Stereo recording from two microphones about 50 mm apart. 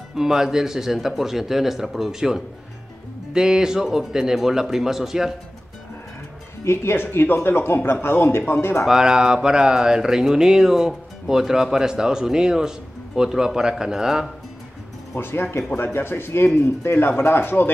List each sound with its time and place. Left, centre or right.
0.1 s a man's voice: centre
6.6 s speech: left
8.8 s a man's voice: centre
15.1 s speech: left